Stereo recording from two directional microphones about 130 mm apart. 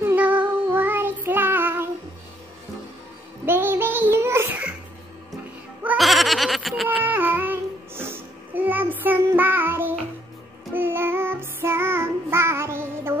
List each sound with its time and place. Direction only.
0.0 s child singing: 10° right (ahead or behind)
3.4 s music: 15° right (ahead or behind)
5.9 s goat: centre (ahead or behind)
7.1 s child singing: 15° right (ahead or behind)